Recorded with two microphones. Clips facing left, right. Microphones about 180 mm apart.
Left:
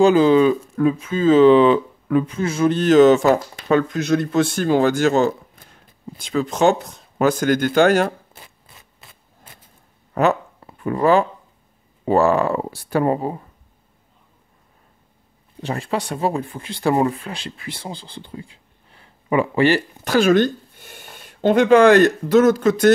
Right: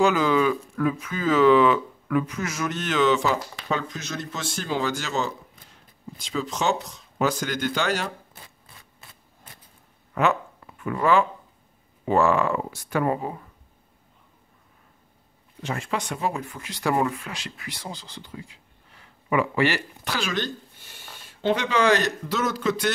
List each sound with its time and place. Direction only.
0.0 s speech: 30° left (ahead or behind); by 8.1 s 50° left (ahead or behind)
10.1 s a sound: 35° left (ahead or behind)
12.0 s speech: 35° left (ahead or behind)
15.6 s speech: 35° left (ahead or behind)
20.1 s speech: 50° left (ahead or behind)